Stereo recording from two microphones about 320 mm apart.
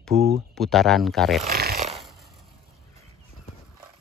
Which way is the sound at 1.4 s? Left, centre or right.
Right.